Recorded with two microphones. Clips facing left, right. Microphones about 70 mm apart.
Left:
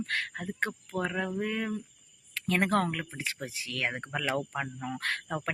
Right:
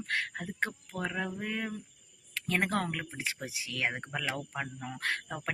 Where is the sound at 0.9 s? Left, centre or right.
Left.